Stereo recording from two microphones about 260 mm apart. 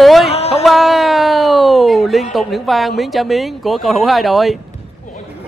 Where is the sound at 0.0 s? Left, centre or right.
Centre.